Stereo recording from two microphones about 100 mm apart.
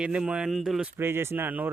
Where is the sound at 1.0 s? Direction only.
25° right (ahead or behind).